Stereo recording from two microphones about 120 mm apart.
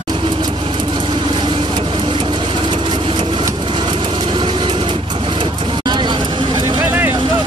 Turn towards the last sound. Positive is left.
turn(degrees=-40)  # may be behind; listen again after turning